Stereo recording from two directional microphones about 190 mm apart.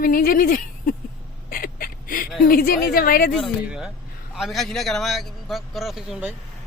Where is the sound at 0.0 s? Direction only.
50° left (ahead or behind).